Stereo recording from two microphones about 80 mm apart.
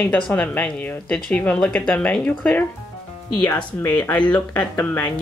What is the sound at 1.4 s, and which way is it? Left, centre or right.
Speech, centre.